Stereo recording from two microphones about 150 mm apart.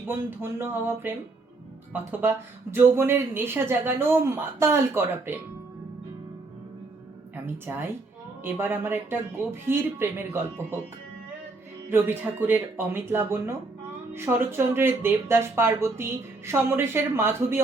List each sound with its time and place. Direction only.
0.0 s speech: 15° right (ahead or behind)
2.7 s speech: 15° right (ahead or behind)
7.4 s speech: 15° right (ahead or behind)
11.9 s speech: 15° right (ahead or behind)